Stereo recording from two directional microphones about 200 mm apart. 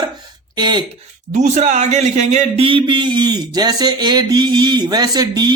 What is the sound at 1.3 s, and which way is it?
Speech, 35° right (ahead or behind).